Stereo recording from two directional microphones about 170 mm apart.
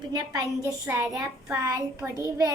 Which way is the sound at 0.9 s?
10° right (ahead or behind).